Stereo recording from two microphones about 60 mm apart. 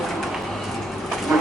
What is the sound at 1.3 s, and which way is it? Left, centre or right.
Dog, centre.